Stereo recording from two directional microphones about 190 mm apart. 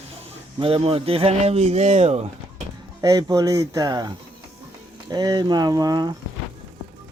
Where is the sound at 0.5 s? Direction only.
30° right (ahead or behind).